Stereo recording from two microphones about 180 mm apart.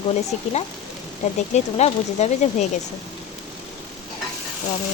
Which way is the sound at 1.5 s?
40° left (ahead or behind).